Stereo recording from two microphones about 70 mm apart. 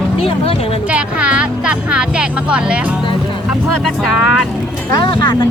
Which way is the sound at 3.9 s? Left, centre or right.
Centre.